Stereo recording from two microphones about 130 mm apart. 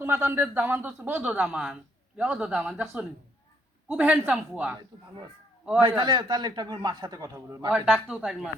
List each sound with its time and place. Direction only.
0.0 s speech: 15° right (ahead or behind)
5.8 s a man's voice: 35° right (ahead or behind)
7.7 s speech: centre (ahead or behind)